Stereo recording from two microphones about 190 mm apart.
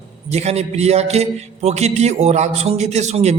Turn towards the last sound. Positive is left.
turn(degrees=-35)  # may be behind; listen again after turning